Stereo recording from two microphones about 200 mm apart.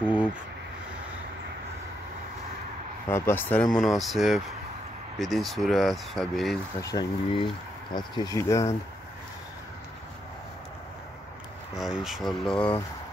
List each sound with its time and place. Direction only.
0.0 s a sound: 10° right (ahead or behind)
3.1 s speech: 10° left (ahead or behind)
6.8 s speech: 20° left (ahead or behind)
11.7 s speech: centre (ahead or behind)